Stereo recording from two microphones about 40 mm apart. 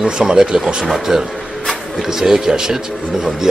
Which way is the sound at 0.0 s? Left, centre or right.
Centre.